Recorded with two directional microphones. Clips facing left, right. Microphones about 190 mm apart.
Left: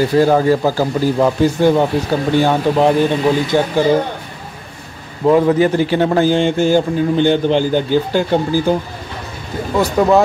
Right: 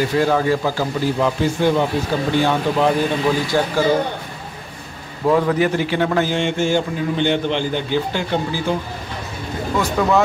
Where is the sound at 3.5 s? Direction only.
20° left (ahead or behind).